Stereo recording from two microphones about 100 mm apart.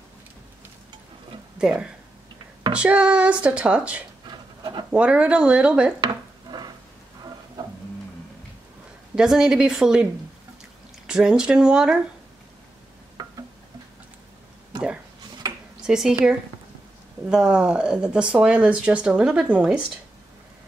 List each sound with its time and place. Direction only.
1.6 s speech: 10° right (ahead or behind)
4.3 s a sound: 45° right (ahead or behind)
4.9 s speech: 10° right (ahead or behind)
6.5 s rain: 40° right (ahead or behind)
9.1 s speech: 5° right (ahead or behind)
11.1 s speech: 10° right (ahead or behind)
15.8 s speech: 5° right (ahead or behind)
17.3 s speech: 5° right (ahead or behind)